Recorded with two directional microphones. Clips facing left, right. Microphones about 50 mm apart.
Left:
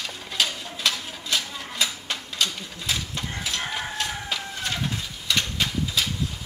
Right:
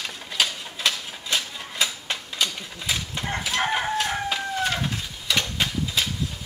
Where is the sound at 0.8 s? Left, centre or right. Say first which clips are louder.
Right 1 dB; right.